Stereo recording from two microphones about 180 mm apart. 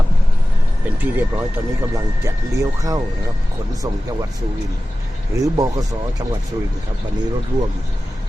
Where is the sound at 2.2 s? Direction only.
20° right (ahead or behind).